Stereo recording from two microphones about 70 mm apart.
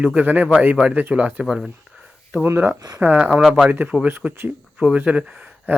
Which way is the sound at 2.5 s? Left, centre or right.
Right.